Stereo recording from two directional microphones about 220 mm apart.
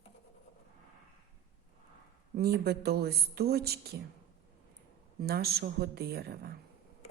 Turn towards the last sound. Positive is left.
turn(degrees=-45)  # may be behind; listen again after turning